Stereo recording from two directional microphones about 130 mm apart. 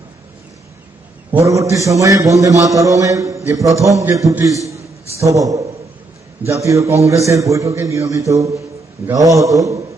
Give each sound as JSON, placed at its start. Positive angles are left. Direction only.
{"t": 1.3, "sound": "a man's voice", "side_deg": -25}